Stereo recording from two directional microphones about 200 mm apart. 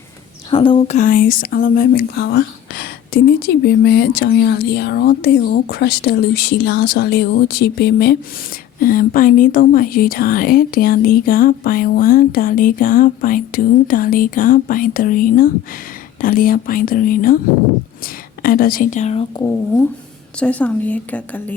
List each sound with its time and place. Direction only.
0.5 s speech: 25° left (ahead or behind)
0.9 s speech: 40° left (ahead or behind); by 8.1 s 55° left (ahead or behind)
8.8 s speech: 45° left (ahead or behind)
19.4 s a woman's voice: 15° left (ahead or behind)
20.4 s a woman's voice: 5° left (ahead or behind)